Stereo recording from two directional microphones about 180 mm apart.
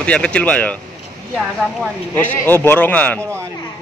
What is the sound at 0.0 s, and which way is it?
Speech, 5° left (ahead or behind).